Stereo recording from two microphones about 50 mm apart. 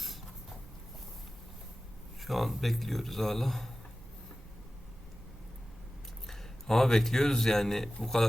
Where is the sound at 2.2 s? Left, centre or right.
Centre.